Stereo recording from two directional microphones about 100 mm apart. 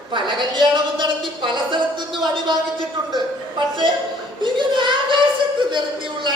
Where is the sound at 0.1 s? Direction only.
55° right (ahead or behind).